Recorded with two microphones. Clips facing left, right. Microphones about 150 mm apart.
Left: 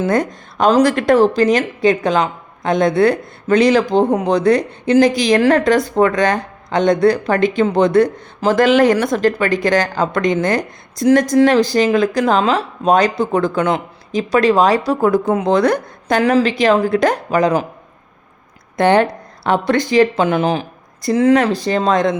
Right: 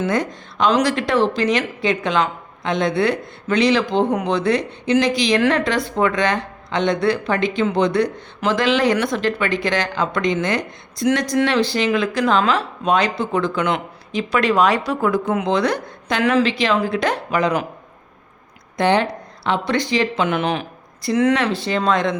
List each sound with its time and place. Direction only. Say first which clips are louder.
0.1 s a woman's voice: left 4 dB; 45° left (ahead or behind)
15.4 s a woman's voice: left 5 dB; 50° left (ahead or behind)
18.8 s a woman's voice: left 5 dB; 50° left (ahead or behind)
20.2 s speech: left 4 dB; 35° left (ahead or behind)